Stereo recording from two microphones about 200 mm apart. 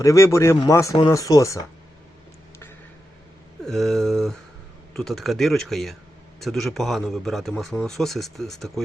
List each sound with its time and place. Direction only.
0.0 s speech: 15° left (ahead or behind)
3.6 s speech: centre (ahead or behind)